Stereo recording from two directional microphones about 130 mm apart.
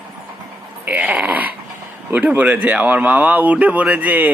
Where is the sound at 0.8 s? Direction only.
10° right (ahead or behind).